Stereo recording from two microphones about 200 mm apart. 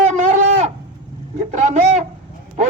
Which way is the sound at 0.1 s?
35° right (ahead or behind).